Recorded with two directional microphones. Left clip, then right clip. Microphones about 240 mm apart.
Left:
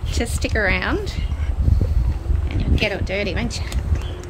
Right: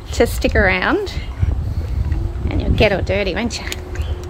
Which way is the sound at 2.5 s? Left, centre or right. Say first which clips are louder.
Right 7 dB; centre.